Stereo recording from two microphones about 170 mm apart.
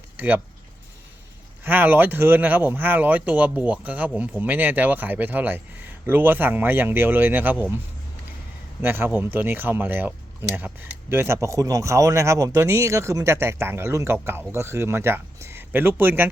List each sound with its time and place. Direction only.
0.2 s speech: 10° right (ahead or behind)
1.6 s speech: 10° right (ahead or behind)
8.8 s speech: 15° right (ahead or behind)